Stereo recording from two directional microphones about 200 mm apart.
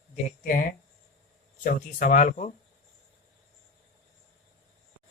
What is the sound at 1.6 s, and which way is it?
Speech, 40° left (ahead or behind).